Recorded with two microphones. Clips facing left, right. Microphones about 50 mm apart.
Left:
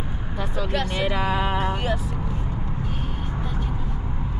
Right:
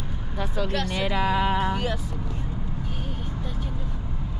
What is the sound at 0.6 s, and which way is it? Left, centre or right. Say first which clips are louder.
Speech: left 2 dB; centre.